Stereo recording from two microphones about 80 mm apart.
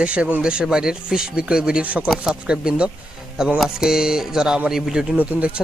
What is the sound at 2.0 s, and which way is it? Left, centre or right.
Speech, centre.